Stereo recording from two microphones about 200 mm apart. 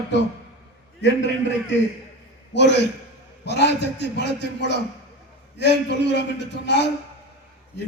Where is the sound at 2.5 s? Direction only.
60° left (ahead or behind).